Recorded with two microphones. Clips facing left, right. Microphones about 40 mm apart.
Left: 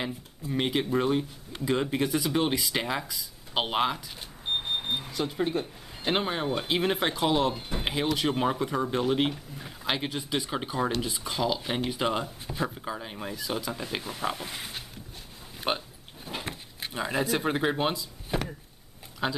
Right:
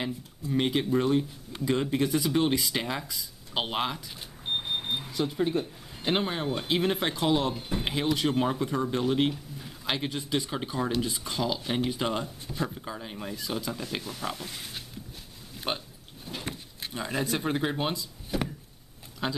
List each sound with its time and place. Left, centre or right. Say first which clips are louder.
0.0 s speech: right 1 dB; centre; by 14.7 s left
15.5 s a sound: left 3 dB; centre
16.4 s speech: even; centre
18.3 s speech: even; left
19.2 s speech: left 2 dB; centre